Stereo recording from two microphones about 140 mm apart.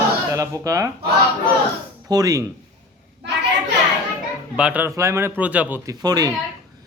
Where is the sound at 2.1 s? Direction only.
25° right (ahead or behind).